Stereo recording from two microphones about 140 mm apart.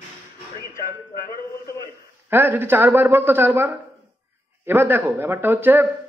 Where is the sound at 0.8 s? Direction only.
20° left (ahead or behind).